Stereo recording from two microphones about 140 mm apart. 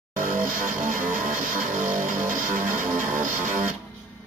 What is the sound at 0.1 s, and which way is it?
Music, 70° right (ahead or behind).